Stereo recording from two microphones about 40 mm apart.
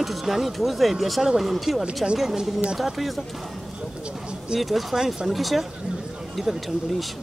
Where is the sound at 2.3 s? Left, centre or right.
Centre.